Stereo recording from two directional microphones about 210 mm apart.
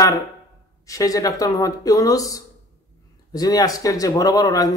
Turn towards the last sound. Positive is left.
turn(degrees=15)  # may be behind; listen again after turning